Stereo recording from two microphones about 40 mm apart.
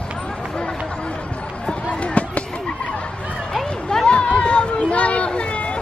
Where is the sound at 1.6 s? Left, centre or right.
Left.